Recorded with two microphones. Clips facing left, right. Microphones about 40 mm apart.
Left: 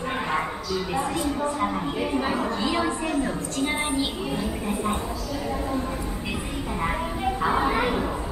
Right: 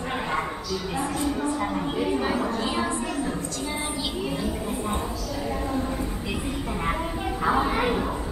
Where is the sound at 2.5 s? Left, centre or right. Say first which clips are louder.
Left 2 dB; left.